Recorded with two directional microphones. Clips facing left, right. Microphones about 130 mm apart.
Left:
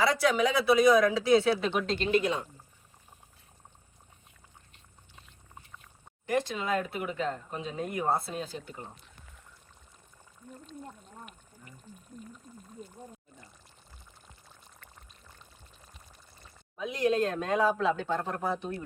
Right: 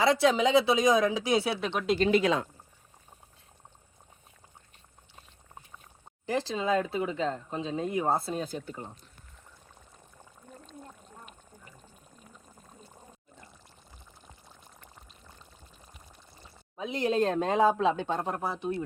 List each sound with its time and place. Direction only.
0.0 s speech: 25° right (ahead or behind)
1.5 s speech: centre (ahead or behind)
2.0 s speech: 90° right
6.2 s speech: 30° right (ahead or behind)
16.4 s speech: 30° right (ahead or behind)
18.4 s speech: 5° right (ahead or behind)